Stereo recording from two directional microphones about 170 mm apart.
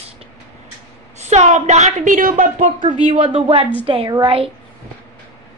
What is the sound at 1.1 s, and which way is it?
A woman's voice, 40° right (ahead or behind).